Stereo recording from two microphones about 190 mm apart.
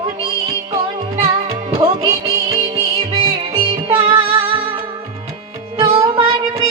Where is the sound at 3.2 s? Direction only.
30° right (ahead or behind).